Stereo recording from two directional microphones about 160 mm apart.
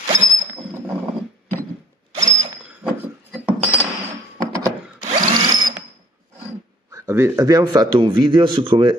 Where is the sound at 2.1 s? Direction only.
45° right (ahead or behind).